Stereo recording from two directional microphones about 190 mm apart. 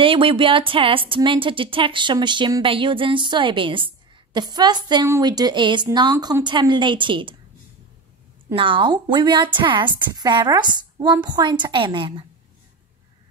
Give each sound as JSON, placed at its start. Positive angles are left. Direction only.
{"t": 0.0, "sound": "speech", "side_deg": -30}
{"t": 8.5, "sound": "speech", "side_deg": -25}